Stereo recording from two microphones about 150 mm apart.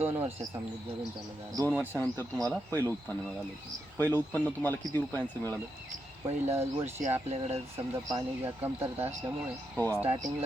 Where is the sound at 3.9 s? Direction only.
10° left (ahead or behind).